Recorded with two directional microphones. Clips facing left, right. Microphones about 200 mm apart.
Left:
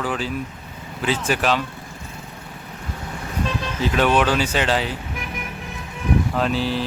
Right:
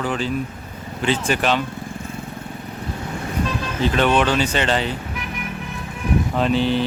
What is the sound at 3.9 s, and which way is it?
Speech, 5° left (ahead or behind).